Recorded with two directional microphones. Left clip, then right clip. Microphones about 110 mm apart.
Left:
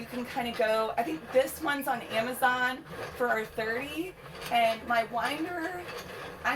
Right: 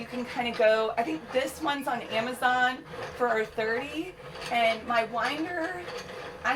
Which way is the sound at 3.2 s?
30° right (ahead or behind).